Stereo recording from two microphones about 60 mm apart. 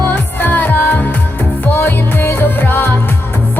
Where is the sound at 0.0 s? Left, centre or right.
Left.